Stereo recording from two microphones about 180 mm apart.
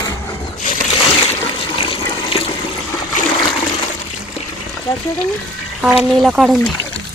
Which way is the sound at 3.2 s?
45° left (ahead or behind).